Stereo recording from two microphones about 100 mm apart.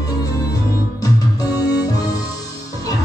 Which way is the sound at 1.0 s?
35° left (ahead or behind).